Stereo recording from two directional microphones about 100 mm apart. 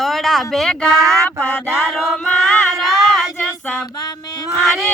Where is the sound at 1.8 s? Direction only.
Centre (ahead or behind).